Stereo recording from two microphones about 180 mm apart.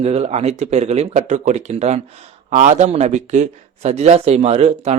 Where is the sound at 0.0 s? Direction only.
35° right (ahead or behind).